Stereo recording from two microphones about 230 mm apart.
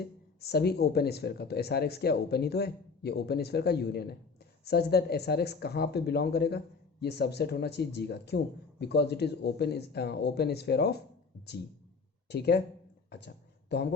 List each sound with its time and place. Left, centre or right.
0.0 s speech: left
12.3 s speech: left
13.1 s a sound: left